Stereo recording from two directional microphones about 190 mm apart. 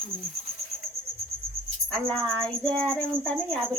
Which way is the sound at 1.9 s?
5° left (ahead or behind).